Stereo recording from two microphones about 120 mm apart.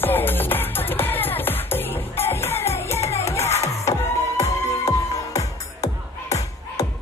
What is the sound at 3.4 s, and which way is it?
Music, 65° left (ahead or behind).